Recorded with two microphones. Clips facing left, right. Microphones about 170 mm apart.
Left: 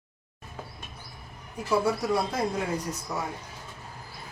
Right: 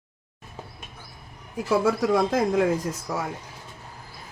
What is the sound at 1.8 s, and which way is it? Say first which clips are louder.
Speech: right 5 dB; 90° right.